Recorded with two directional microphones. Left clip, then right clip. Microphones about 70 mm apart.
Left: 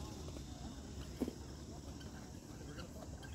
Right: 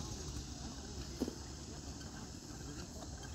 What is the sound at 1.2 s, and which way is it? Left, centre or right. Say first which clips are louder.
Vehicle: right 1 dB; centre.